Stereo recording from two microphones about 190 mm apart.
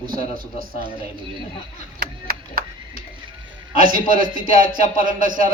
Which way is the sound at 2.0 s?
50° right (ahead or behind).